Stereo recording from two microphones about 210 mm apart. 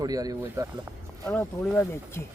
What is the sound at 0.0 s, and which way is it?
Speech, 15° right (ahead or behind).